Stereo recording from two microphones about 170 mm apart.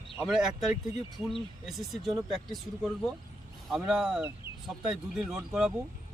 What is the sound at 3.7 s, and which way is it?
Speech, 5° right (ahead or behind).